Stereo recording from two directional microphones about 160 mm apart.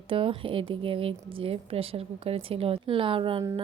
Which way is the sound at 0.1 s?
35° right (ahead or behind).